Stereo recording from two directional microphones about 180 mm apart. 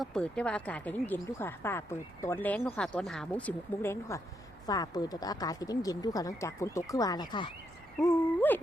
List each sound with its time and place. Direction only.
0.0 s speech: 5° left (ahead or behind)
4.6 s speech: 20° left (ahead or behind)
8.0 s speech: 10° left (ahead or behind)